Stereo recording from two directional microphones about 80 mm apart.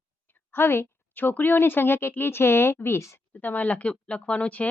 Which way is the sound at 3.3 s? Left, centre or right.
Left.